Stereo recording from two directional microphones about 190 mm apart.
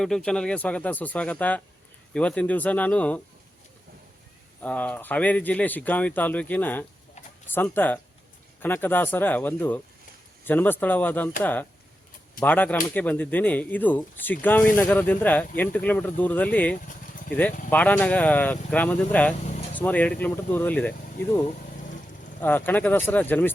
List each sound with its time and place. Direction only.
0.0 s speech: 5° left (ahead or behind)
4.6 s speech: 10° left (ahead or behind)
12.4 s speech: 10° left (ahead or behind)
22.4 s speech: 10° left (ahead or behind)